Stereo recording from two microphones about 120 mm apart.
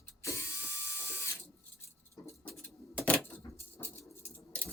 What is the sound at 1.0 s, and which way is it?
Ratchet, 20° left (ahead or behind).